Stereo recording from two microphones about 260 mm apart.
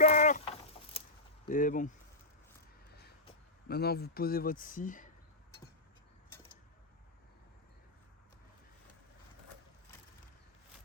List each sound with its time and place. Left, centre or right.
0.0 s sheep: left
1.5 s speech: left
3.7 s speech: left